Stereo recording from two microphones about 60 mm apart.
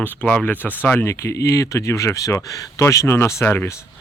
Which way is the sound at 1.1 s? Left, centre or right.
Left.